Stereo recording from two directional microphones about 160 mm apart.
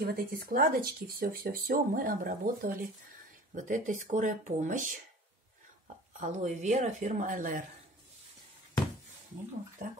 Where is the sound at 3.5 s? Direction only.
55° right (ahead or behind).